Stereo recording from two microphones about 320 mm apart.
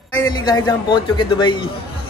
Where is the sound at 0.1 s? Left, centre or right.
Centre.